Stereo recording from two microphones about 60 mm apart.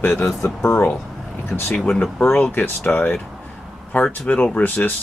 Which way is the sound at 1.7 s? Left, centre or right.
Centre.